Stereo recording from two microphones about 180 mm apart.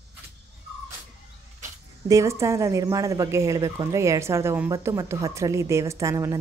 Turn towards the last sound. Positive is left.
turn(degrees=-15)  # may be behind; listen again after turning